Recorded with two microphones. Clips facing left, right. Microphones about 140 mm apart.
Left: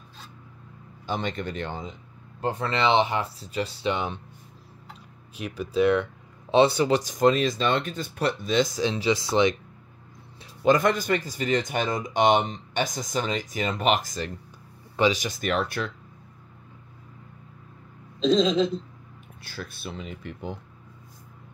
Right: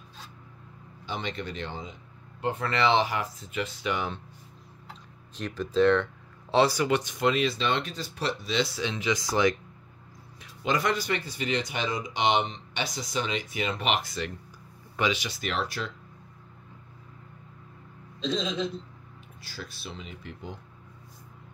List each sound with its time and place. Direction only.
1.0 s speech: 45° left (ahead or behind)
2.4 s speech: 25° left (ahead or behind)
5.3 s speech: 10° left (ahead or behind)
6.5 s speech: 25° left (ahead or behind)
10.6 s speech: 45° left (ahead or behind)
18.2 s speech: 90° left
19.4 s speech: 55° left (ahead or behind)